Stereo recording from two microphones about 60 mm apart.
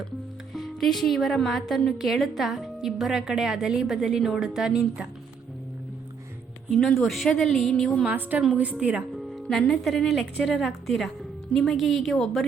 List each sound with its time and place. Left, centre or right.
0.5 s a woman's voice: centre
6.7 s a woman's voice: centre
8.0 s a woman's voice: right
9.1 s a woman's voice: centre